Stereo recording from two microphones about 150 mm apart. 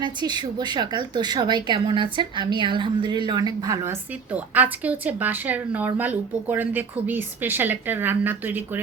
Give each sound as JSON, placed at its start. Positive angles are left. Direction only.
{"t": 0.0, "sound": "speech", "side_deg": -30}
{"t": 3.8, "sound": "a woman's voice", "side_deg": -10}